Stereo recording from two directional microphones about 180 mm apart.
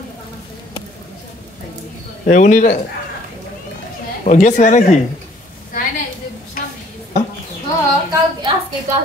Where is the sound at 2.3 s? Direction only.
45° left (ahead or behind).